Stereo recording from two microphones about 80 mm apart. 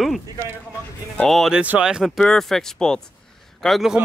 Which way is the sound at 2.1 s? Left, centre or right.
Centre.